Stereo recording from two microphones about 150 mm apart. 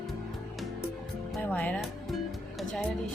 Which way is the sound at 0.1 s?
Centre (ahead or behind).